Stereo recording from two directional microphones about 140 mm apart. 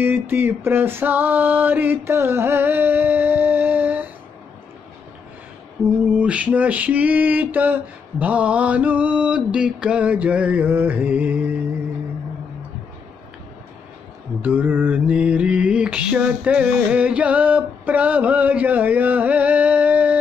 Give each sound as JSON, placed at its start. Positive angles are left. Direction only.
{"t": 0.0, "sound": "mantra", "side_deg": -15}
{"t": 6.1, "sound": "mantra", "side_deg": -10}
{"t": 14.4, "sound": "mantra", "side_deg": -15}